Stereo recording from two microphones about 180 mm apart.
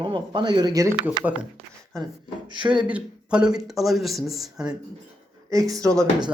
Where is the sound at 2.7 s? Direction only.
5° right (ahead or behind).